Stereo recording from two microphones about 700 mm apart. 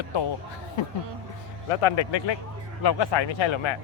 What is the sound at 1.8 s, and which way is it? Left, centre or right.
Speech, left.